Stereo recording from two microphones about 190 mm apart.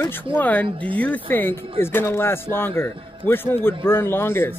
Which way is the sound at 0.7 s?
25° right (ahead or behind).